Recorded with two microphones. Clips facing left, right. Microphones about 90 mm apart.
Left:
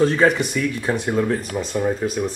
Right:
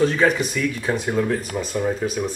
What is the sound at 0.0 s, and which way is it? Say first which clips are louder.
Speech: left 2 dB; 35° left (ahead or behind).